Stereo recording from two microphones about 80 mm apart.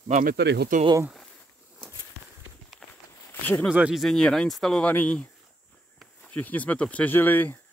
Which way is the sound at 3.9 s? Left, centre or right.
Centre.